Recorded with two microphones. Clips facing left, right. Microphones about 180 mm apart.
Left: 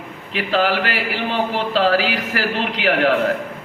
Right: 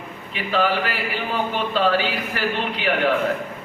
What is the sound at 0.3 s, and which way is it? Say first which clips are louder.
A man's voice: left 3 dB; 90° left.